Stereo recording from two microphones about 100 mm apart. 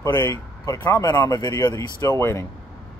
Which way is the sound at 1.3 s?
40° left (ahead or behind).